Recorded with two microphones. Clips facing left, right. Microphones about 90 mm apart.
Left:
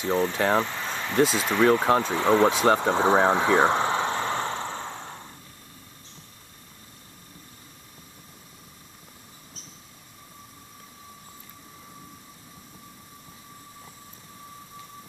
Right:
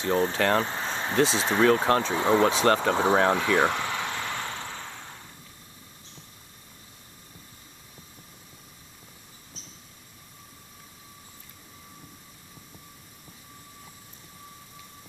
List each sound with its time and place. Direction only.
0.1 s speech: 30° right (ahead or behind)
0.4 s speech: 5° left (ahead or behind)
0.7 s a sound: 25° right (ahead or behind)
1.3 s speech: 30° right (ahead or behind)
1.9 s speech: 5° left (ahead or behind)
2.1 s speech: 15° right (ahead or behind)
2.4 s speech: 10° left (ahead or behind)
3.0 s a sound: 20° left (ahead or behind)